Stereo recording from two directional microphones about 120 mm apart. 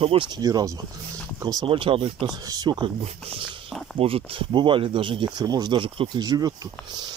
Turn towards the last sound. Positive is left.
turn(degrees=-30)  # may be behind; listen again after turning